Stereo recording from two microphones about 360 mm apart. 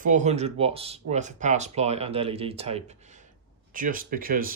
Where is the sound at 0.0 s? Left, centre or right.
Centre.